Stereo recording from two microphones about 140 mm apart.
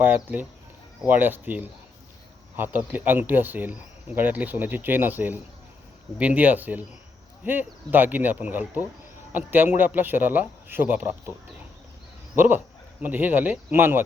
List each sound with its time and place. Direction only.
0.0 s speech: 10° right (ahead or behind)
12.4 s speech: 15° right (ahead or behind)